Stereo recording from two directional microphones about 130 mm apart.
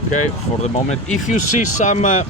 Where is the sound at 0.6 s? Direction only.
65° left (ahead or behind).